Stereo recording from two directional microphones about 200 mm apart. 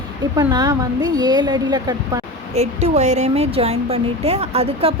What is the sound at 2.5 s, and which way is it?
A woman's voice, 30° right (ahead or behind).